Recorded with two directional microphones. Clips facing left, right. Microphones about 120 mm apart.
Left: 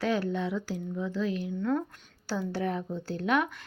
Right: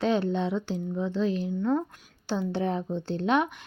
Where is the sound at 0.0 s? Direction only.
25° right (ahead or behind).